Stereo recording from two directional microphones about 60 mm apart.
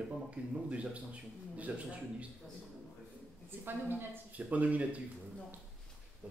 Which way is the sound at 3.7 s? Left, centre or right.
Right.